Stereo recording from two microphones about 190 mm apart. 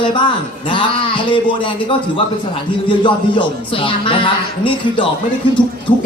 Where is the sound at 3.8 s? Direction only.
25° left (ahead or behind).